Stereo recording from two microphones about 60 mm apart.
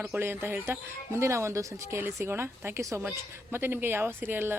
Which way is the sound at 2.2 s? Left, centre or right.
Right.